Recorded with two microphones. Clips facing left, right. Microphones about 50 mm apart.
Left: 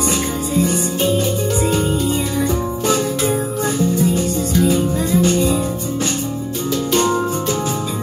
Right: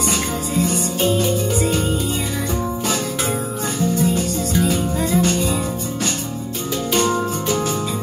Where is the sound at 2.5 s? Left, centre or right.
Centre.